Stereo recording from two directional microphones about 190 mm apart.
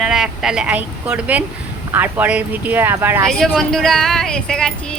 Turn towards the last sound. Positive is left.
turn(degrees=5)  # may be behind; listen again after turning